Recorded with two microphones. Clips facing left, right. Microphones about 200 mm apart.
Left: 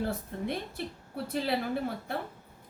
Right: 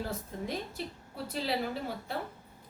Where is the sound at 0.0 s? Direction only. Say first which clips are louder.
Left 4 dB; 60° left (ahead or behind).